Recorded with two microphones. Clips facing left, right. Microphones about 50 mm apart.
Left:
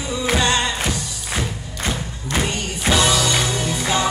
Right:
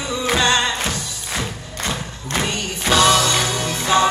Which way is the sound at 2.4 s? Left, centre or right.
Left.